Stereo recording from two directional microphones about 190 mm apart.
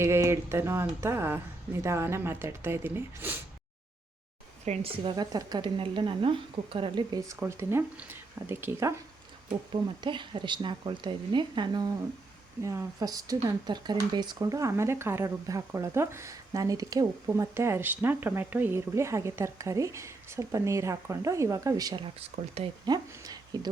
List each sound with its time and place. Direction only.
0.0 s speech: 15° right (ahead or behind)
4.6 s a woman's voice: 35° right (ahead or behind); by 9.0 s 15° right (ahead or behind)
10.0 s a woman's voice: 25° right (ahead or behind)
23.5 s a woman's voice: 20° right (ahead or behind)